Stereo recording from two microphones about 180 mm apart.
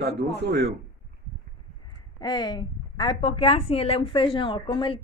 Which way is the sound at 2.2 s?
25° left (ahead or behind).